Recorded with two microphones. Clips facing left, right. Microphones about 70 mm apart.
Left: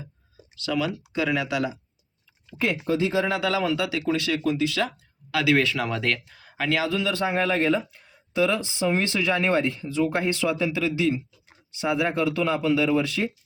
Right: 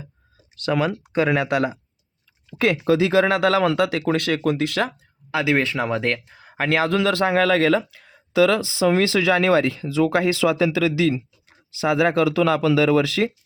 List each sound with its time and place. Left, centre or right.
0.6 s speech: right
2.6 s speech: right
5.3 s speech: right
6.7 s speech: right